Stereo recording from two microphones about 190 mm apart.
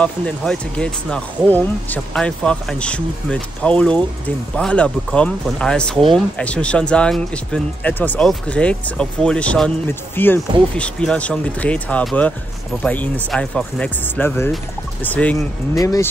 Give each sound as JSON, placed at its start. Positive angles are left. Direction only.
{"t": 0.0, "sound": "speech", "side_deg": 5}
{"t": 15.7, "sound": "speech", "side_deg": 20}